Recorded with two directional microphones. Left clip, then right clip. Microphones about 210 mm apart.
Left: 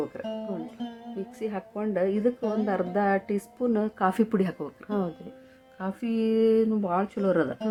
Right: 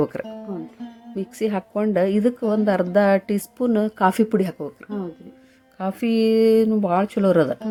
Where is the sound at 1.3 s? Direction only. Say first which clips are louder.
Right 10 dB; 30° right (ahead or behind).